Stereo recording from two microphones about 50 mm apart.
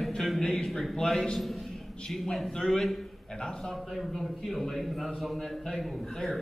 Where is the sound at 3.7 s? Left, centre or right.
Centre.